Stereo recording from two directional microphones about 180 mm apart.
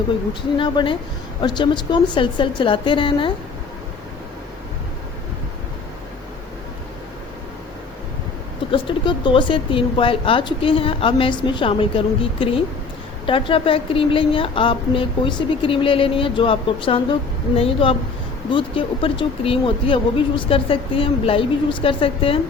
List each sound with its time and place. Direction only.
0.5 s speech: 30° left (ahead or behind)
8.7 s speech: 25° left (ahead or behind)